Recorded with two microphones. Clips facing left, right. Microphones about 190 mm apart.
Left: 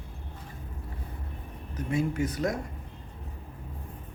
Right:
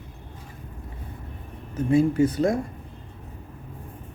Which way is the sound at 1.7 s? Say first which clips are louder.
Right 9 dB; 30° right (ahead or behind).